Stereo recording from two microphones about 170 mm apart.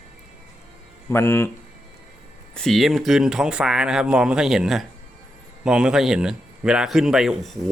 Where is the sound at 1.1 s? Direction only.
15° left (ahead or behind).